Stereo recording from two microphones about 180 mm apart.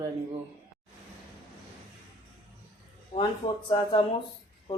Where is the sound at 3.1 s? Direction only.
30° left (ahead or behind).